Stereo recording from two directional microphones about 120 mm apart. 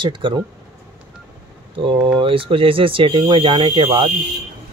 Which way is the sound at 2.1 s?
45° right (ahead or behind).